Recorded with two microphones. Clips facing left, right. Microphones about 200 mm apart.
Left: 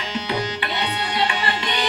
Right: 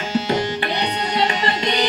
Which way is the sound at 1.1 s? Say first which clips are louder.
Right 3 dB; 40° right (ahead or behind).